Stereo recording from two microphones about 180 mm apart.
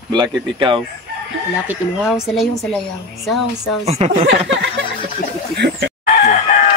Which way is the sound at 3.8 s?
35° right (ahead or behind).